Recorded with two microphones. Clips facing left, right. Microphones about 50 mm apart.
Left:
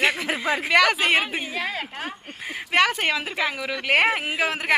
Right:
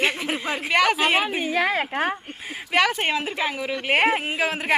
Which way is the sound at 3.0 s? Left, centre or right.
Left.